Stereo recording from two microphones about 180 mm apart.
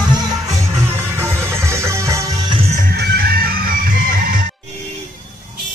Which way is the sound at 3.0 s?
60° right (ahead or behind).